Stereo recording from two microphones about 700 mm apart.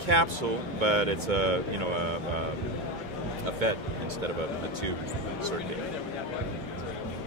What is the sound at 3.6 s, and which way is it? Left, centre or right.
Speech, right.